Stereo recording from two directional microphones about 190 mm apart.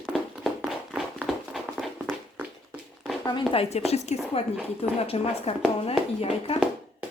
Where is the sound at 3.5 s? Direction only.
30° left (ahead or behind).